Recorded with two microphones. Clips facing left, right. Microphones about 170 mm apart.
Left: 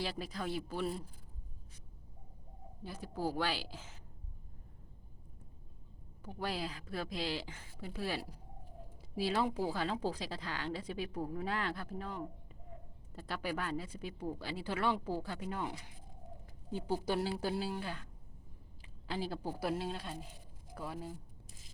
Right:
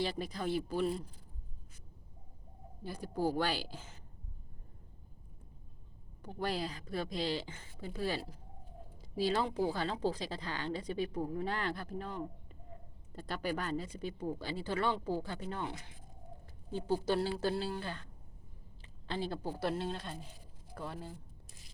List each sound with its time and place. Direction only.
0.0 s speech: centre (ahead or behind)
2.8 s speech: centre (ahead or behind)
6.2 s a woman's voice: 5° left (ahead or behind)
16.7 s a woman's voice: 10° left (ahead or behind)